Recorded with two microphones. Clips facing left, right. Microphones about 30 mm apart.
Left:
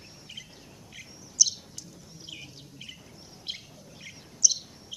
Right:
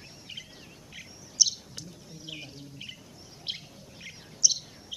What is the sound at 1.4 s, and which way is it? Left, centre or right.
Bird, right.